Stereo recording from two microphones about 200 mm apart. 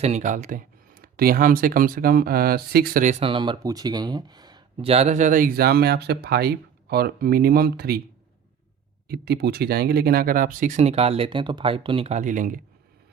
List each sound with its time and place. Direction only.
0.0 s speech: 35° right (ahead or behind)
9.0 s speech: 50° right (ahead or behind)